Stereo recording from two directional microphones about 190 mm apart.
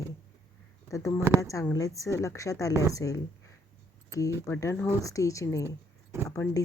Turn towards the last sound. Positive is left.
turn(degrees=15)  # may be behind; listen again after turning